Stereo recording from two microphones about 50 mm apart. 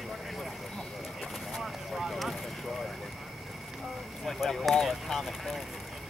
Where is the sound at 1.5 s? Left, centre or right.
Centre.